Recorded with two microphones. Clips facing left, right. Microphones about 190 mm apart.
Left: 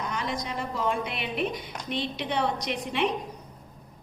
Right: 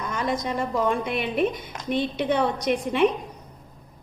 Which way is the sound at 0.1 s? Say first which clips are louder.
Right 5 dB; 50° right (ahead or behind).